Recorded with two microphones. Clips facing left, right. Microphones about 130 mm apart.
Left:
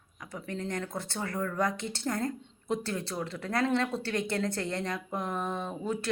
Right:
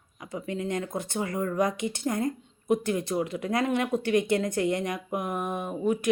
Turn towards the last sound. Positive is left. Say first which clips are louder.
# right 6 dB
turn(degrees=-15)  # may be behind; listen again after turning